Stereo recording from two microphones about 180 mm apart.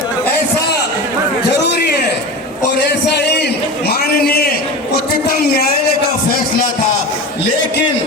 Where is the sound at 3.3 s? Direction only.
70° left (ahead or behind).